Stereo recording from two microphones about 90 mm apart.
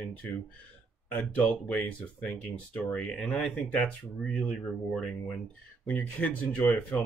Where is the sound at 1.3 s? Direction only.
15° left (ahead or behind).